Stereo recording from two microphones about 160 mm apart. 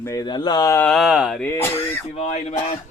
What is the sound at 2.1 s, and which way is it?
Speech, 45° left (ahead or behind).